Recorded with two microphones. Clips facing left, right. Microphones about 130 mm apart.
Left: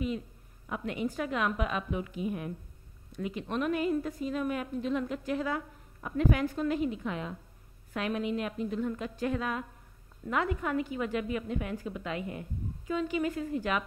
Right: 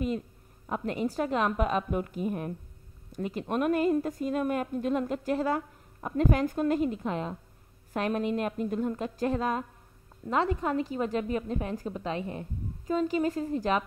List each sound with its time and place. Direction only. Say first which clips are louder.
0.7 s a woman's voice: right 3 dB; 40° right (ahead or behind)